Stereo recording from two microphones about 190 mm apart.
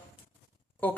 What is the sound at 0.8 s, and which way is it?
Speech, 10° left (ahead or behind).